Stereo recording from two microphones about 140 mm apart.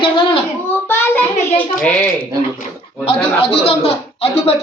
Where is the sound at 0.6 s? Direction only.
15° left (ahead or behind).